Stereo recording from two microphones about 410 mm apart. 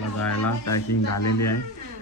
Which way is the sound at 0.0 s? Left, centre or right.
Left.